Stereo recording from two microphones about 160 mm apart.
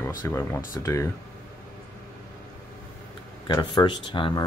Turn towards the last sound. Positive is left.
turn(degrees=30)  # may be behind; listen again after turning